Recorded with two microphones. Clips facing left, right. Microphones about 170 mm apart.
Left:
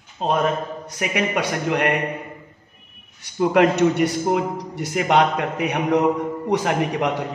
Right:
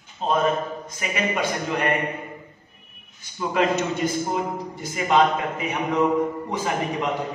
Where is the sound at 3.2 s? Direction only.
65° left (ahead or behind).